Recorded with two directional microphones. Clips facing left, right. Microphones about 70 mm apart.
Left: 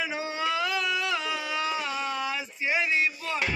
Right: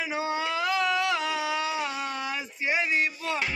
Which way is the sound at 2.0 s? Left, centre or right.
Right.